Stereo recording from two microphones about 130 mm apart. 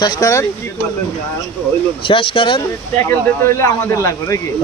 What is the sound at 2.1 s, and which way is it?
Speech, 45° left (ahead or behind).